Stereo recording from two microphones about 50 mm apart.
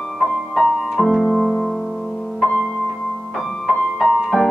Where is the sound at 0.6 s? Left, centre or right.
Centre.